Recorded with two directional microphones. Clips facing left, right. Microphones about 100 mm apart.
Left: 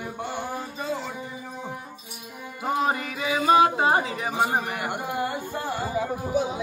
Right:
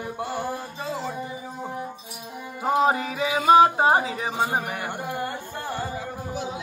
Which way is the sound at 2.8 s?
30° right (ahead or behind).